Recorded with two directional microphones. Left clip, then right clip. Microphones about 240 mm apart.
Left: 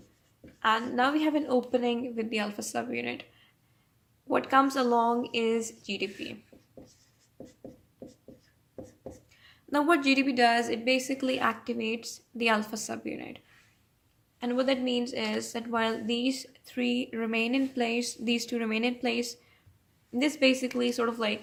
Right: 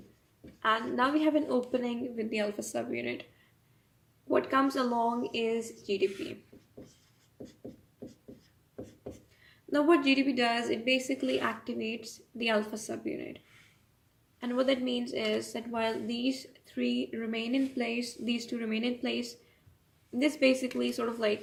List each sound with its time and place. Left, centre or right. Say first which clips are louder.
0.6 s a woman's voice: left 2 dB; left
4.3 s a woman's voice: left 3 dB; left
9.7 s a woman's voice: left 1 dB; left
14.3 s a woman's voice: left 1 dB; left